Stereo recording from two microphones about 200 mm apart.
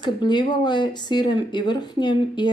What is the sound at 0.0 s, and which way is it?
Speech, 20° left (ahead or behind).